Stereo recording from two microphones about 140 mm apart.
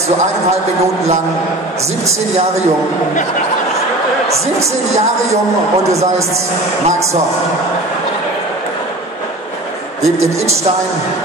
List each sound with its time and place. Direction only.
10.0 s a woman's voice: 20° right (ahead or behind)